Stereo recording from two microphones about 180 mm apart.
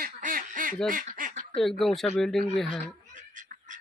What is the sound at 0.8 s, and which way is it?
Duck, 50° right (ahead or behind).